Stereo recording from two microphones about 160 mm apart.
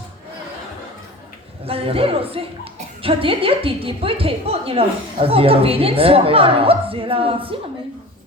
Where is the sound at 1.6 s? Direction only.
35° right (ahead or behind).